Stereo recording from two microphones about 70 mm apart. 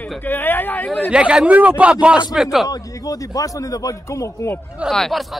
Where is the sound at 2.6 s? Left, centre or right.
Left.